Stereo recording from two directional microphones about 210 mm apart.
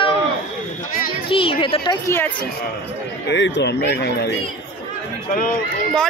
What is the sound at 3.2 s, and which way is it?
Speech, 60° left (ahead or behind).